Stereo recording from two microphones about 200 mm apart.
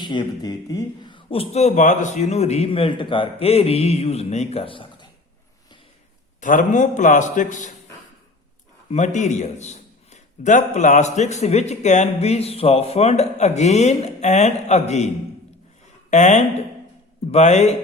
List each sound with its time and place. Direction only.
0.0 s speech: 20° left (ahead or behind)
6.4 s a man's voice: 40° left (ahead or behind)
8.9 s a man's voice: 35° left (ahead or behind)
16.0 s a man's voice: 35° left (ahead or behind)